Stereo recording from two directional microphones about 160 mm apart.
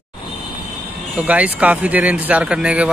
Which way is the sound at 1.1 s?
10° right (ahead or behind).